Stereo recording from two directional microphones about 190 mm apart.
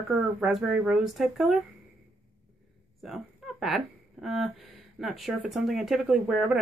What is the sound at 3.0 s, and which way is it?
Speech, centre (ahead or behind).